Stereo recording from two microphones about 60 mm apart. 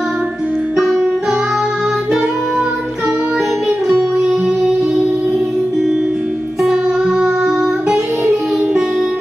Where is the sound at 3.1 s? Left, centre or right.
Right.